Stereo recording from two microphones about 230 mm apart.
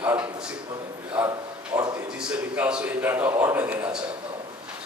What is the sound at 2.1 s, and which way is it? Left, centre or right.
A man's voice, centre.